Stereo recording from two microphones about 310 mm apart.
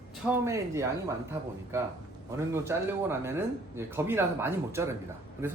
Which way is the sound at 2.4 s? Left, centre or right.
Centre.